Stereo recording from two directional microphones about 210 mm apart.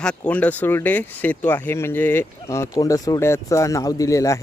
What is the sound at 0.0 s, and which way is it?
Speech, 5° left (ahead or behind).